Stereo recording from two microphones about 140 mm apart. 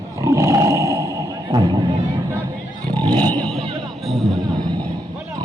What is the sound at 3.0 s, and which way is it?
Vehicle, 10° left (ahead or behind).